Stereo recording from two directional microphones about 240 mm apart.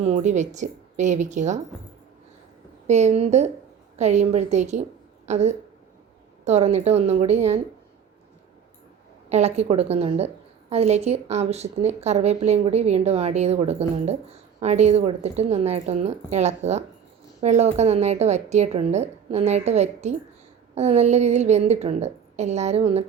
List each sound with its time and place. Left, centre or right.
0.0 s a woman's voice: right
2.8 s a woman's voice: right
9.3 s a woman's voice: right